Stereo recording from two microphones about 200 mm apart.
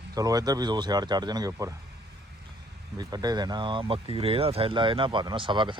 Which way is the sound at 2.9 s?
20° right (ahead or behind).